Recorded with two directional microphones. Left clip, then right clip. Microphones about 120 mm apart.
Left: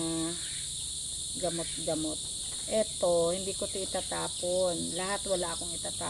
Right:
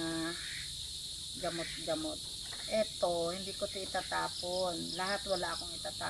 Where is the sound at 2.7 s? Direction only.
35° left (ahead or behind).